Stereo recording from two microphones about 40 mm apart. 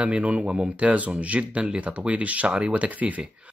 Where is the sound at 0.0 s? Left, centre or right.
Right.